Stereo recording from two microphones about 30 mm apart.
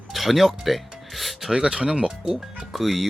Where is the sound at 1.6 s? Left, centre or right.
Right.